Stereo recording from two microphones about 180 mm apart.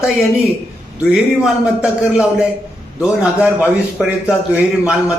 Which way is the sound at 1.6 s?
5° right (ahead or behind).